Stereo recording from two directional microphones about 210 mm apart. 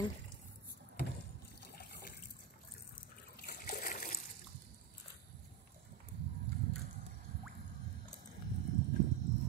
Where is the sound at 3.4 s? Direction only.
45° left (ahead or behind).